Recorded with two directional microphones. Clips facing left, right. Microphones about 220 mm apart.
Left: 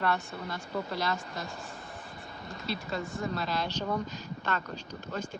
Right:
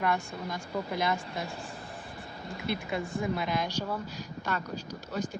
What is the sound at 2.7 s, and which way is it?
Speech, 55° right (ahead or behind).